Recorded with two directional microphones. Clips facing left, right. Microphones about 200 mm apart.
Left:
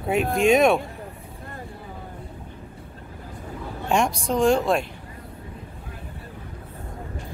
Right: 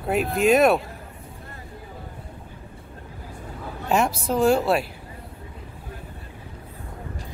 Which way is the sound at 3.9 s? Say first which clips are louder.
Even; 5° right (ahead or behind).